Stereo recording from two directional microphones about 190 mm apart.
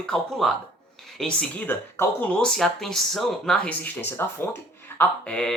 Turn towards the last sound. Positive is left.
turn(degrees=5)  # may be behind; listen again after turning